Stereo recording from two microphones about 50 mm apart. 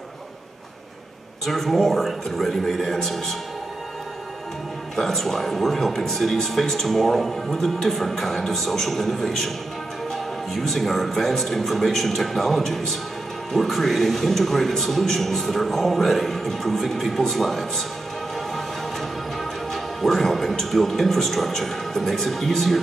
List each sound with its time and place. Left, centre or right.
1.4 s speech: centre
4.9 s speech: centre
19.7 s speech: centre